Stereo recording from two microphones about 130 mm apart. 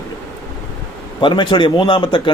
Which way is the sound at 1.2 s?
35° left (ahead or behind).